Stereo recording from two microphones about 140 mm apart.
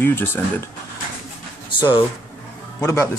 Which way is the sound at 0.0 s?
15° left (ahead or behind).